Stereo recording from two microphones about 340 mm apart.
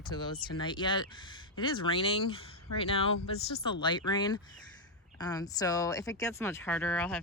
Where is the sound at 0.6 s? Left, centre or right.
Centre.